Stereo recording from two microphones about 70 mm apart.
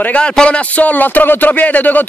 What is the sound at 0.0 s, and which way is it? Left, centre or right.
Speech, centre.